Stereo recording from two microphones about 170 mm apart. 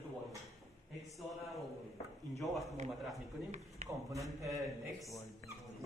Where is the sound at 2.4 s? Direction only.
Centre (ahead or behind).